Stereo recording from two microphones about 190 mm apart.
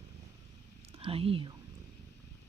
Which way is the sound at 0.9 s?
30° right (ahead or behind).